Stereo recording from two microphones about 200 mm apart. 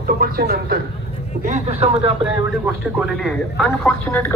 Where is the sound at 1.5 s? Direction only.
30° right (ahead or behind).